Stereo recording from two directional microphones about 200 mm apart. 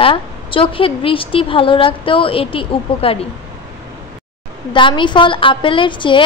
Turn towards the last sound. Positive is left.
turn(degrees=25)  # may be behind; listen again after turning